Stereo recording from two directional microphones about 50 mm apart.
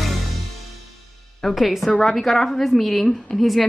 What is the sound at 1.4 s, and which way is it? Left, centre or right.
A woman's voice, centre.